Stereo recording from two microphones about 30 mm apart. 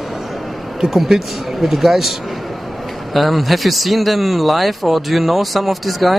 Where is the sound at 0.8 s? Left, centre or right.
Centre.